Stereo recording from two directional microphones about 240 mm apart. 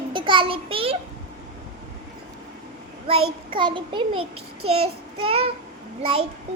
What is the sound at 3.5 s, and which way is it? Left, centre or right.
A child's voice, centre.